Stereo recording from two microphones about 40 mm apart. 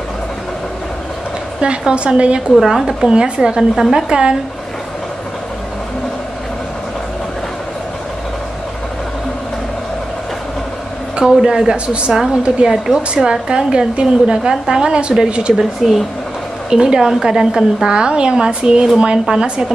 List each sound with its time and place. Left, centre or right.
1.6 s a woman's voice: right
2.6 s a woman's voice: centre
3.1 s a woman's voice: right
11.1 s a woman's voice: centre
15.8 s a woman's voice: centre
16.7 s a woman's voice: centre
17.8 s a woman's voice: right